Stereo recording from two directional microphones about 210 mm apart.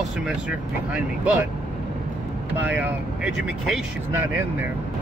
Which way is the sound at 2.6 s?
10° right (ahead or behind).